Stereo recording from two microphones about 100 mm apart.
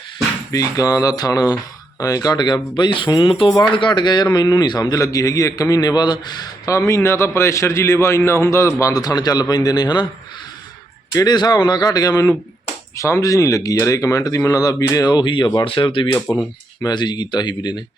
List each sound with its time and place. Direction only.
0.5 s a man's voice: 35° left (ahead or behind)
6.7 s a man's voice: 30° left (ahead or behind)
11.1 s speech: 40° left (ahead or behind)
15.6 s speech: 60° left (ahead or behind)
16.1 s a man's voice: 20° left (ahead or behind)
16.8 s a man's voice: 45° left (ahead or behind)